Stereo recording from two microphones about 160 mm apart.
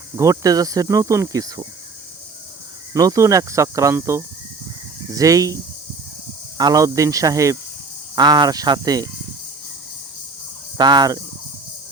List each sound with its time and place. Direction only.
0.2 s speech: 20° right (ahead or behind)
2.9 s speech: 20° right (ahead or behind)
6.6 s speech: 25° right (ahead or behind)
10.8 s speech: 25° right (ahead or behind)